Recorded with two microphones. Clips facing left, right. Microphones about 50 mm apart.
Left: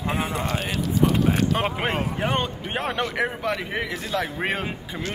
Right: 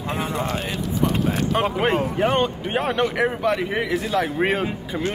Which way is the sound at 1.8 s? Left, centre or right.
Centre.